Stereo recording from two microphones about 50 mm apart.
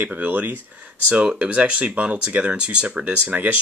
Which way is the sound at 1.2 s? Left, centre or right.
Right.